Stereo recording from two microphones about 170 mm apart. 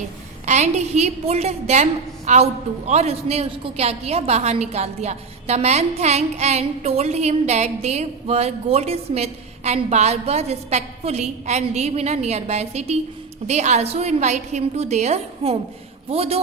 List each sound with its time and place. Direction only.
0.4 s a woman's voice: 40° right (ahead or behind)